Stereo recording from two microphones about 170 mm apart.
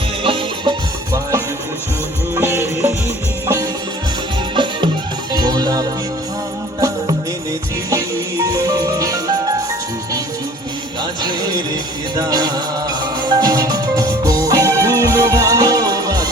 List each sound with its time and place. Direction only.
0.2 s music: 30° right (ahead or behind)
7.9 s music: 15° right (ahead or behind)
11.2 s music: 25° right (ahead or behind)